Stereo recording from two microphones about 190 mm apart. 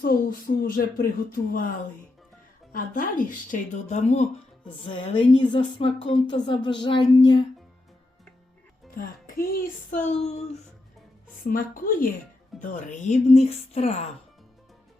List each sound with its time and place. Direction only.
0.0 s speech: 50° left (ahead or behind)
2.7 s speech: 45° left (ahead or behind)
4.6 s a woman's voice: 25° left (ahead or behind)
9.0 s speech: 50° left (ahead or behind); by 10.6 s 35° left (ahead or behind)
11.4 s speech: 45° left (ahead or behind)